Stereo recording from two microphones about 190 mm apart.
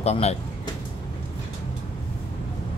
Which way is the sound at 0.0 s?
35° left (ahead or behind).